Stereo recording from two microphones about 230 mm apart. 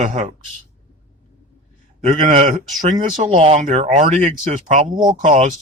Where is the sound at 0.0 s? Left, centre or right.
Right.